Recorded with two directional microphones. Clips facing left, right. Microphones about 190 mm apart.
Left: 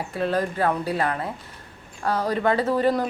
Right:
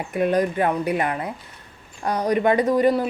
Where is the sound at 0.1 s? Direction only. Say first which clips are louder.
Right 5 dB; 15° right (ahead or behind).